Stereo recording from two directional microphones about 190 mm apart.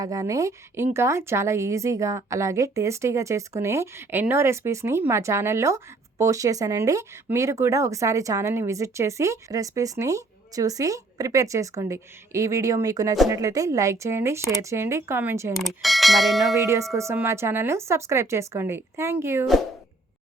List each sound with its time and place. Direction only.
0.0 s a woman's voice: 20° right (ahead or behind)
15.5 s speech: centre (ahead or behind)
16.6 s a woman's voice: 15° right (ahead or behind)